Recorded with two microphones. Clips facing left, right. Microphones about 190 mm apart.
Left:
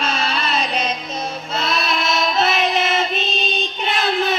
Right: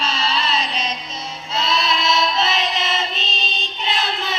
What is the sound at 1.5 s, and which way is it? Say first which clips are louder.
Child singing: right 1 dB; 55° left (ahead or behind).